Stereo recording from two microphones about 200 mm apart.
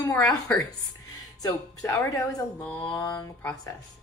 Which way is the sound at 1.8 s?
10° left (ahead or behind).